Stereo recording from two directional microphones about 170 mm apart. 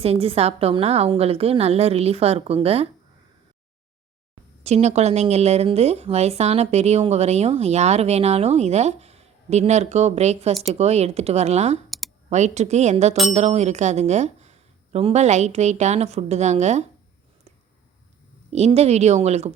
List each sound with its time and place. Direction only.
0.0 s speech: 35° right (ahead or behind)
4.6 s speech: 40° right (ahead or behind)
11.9 s a sound: centre (ahead or behind)
12.3 s speech: 40° right (ahead or behind)
18.5 s speech: 40° right (ahead or behind)